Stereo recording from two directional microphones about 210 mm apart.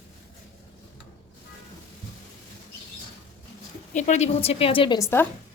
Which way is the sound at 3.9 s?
35° left (ahead or behind).